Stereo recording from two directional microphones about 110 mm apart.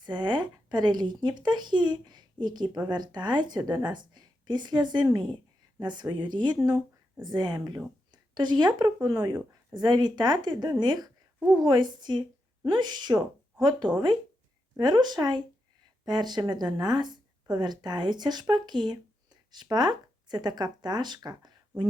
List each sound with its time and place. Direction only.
0.0 s speech: 40° right (ahead or behind)